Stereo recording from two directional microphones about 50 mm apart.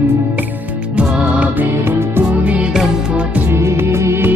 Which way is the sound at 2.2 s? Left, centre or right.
Right.